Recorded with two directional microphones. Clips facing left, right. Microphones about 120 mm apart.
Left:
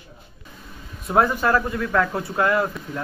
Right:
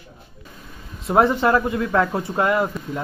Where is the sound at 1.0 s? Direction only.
25° right (ahead or behind).